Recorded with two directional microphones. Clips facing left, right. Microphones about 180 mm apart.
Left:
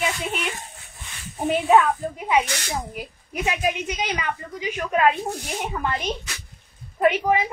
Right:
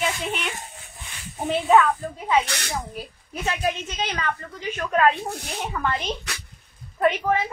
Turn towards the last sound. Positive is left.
turn(degrees=10)  # may be behind; listen again after turning